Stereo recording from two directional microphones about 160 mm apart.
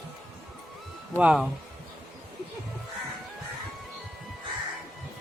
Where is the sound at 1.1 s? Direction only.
5° right (ahead or behind).